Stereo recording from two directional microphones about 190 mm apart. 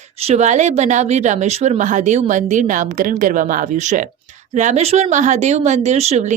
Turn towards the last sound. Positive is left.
turn(degrees=-35)  # may be behind; listen again after turning